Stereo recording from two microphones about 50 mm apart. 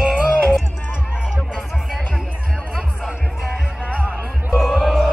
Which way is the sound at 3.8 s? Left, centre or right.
Left.